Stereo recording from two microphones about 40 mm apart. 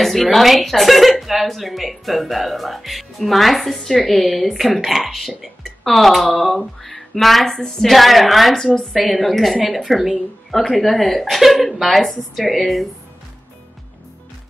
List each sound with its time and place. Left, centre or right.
0.0 s a woman's voice: centre
7.5 s a woman's voice: centre
7.8 s a woman's voice: centre